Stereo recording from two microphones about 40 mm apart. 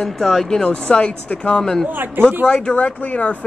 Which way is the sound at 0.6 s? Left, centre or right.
Left.